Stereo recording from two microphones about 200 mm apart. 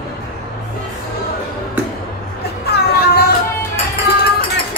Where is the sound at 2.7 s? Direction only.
50° left (ahead or behind).